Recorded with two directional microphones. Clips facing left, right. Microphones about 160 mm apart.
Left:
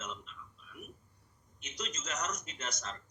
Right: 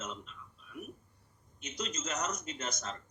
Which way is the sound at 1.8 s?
5° right (ahead or behind).